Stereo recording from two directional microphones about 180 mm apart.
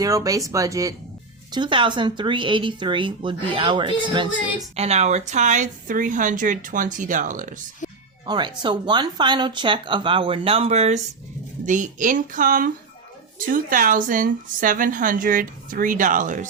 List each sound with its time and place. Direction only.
0.0 s speech: 20° right (ahead or behind)
4.8 s speech: 35° right (ahead or behind)
7.8 s music: 45° left (ahead or behind)
8.3 s speech: 25° right (ahead or behind); by 16.5 s 45° right (ahead or behind)